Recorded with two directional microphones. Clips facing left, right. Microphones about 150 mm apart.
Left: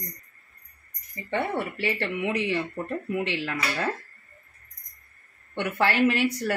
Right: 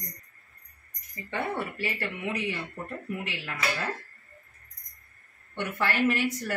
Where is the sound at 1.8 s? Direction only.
75° left (ahead or behind).